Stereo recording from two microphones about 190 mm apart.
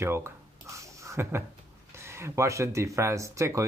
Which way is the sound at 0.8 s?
15° right (ahead or behind).